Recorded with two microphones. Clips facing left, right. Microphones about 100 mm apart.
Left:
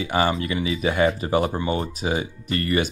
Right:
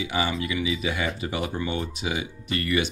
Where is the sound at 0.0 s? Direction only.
45° left (ahead or behind).